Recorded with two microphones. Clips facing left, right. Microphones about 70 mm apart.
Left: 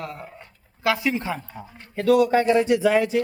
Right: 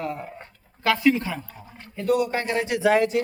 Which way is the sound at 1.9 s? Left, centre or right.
Left.